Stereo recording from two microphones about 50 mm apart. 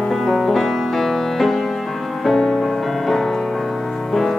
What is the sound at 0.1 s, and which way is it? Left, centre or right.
Music, centre.